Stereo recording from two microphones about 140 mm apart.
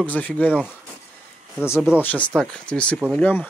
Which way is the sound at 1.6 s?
20° left (ahead or behind).